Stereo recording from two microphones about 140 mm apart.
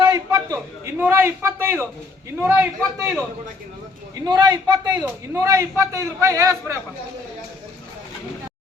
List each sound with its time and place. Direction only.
0.0 s a sound: 25° right (ahead or behind)
1.0 s a man's voice: 15° right (ahead or behind)
4.1 s a man's voice: 30° right (ahead or behind)
5.0 s a man's voice: 20° right (ahead or behind)